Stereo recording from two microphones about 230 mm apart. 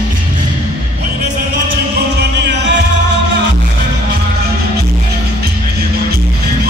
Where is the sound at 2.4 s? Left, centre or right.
Right.